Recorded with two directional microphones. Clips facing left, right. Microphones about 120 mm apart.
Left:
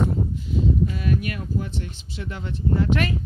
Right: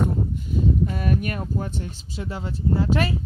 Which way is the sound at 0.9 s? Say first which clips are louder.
Right 1 dB; 45° right (ahead or behind).